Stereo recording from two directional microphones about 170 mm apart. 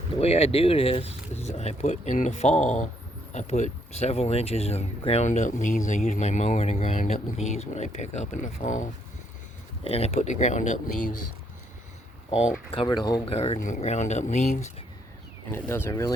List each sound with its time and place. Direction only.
0.2 s speech: 35° left (ahead or behind)
9.8 s speech: 35° left (ahead or behind)
12.3 s speech: 40° left (ahead or behind)
13.3 s speech: 40° left (ahead or behind)
15.5 s speech: 15° left (ahead or behind)